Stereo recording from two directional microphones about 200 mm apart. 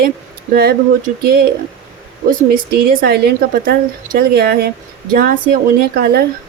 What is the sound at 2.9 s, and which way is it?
Speech, 45° right (ahead or behind).